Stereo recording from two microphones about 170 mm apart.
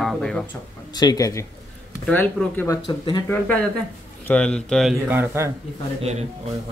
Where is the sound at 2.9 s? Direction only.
30° left (ahead or behind).